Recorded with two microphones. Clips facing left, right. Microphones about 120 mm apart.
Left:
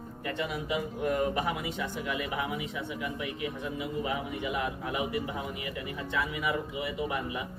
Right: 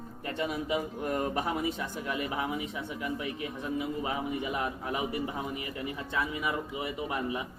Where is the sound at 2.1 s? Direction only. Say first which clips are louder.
Right 2 dB; 35° right (ahead or behind).